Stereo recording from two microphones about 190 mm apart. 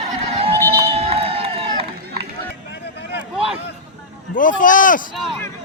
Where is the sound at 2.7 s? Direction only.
65° left (ahead or behind).